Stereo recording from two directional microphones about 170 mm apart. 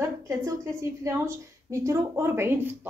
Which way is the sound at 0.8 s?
15° right (ahead or behind).